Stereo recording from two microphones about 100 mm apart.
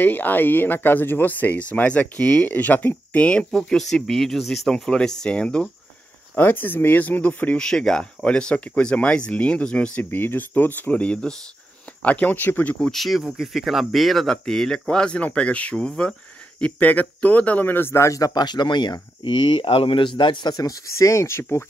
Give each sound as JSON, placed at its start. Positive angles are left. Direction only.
{"t": 0.0, "sound": "speech", "side_deg": 20}
{"t": 7.6, "sound": "speech", "side_deg": 5}
{"t": 12.9, "sound": "speech", "side_deg": 0}
{"t": 20.5, "sound": "speech", "side_deg": 35}